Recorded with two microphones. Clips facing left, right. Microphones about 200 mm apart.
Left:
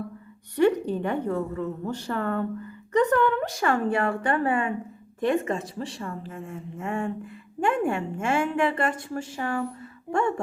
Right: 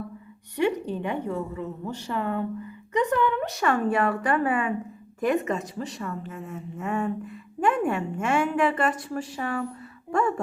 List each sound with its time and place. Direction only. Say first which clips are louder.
0.6 s a sound: left 4 dB; 45° left (ahead or behind)
1.0 s a woman's voice: left 2 dB; 50° left (ahead or behind)
3.4 s a woman's voice: even; 30° left (ahead or behind)